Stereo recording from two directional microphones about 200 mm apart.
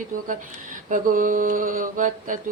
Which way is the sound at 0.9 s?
45° right (ahead or behind).